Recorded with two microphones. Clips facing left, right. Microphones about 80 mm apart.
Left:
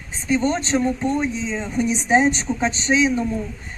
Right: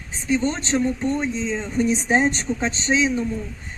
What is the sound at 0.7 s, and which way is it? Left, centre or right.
Speech, centre.